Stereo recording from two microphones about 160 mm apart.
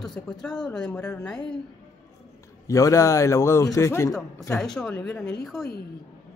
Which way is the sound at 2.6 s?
20° left (ahead or behind).